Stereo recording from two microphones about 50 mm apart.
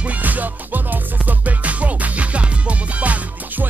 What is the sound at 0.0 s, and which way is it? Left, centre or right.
Music, right.